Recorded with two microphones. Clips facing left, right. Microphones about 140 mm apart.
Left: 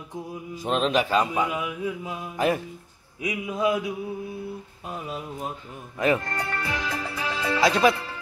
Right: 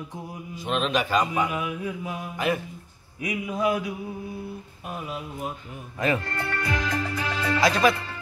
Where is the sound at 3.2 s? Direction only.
20° left (ahead or behind).